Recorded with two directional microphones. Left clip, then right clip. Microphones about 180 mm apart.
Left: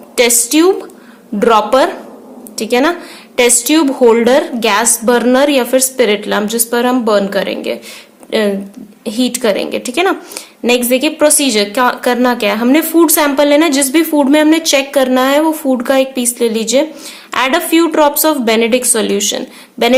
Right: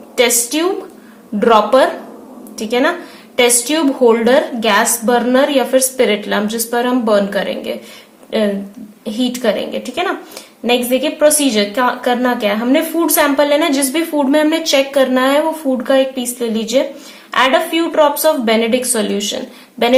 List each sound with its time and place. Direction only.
0.2 s a woman's voice: 40° left (ahead or behind)